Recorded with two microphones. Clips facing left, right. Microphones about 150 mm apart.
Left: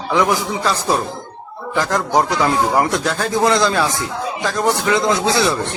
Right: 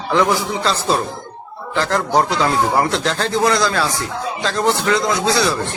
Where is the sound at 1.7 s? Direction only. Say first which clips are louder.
Even; 15° left (ahead or behind).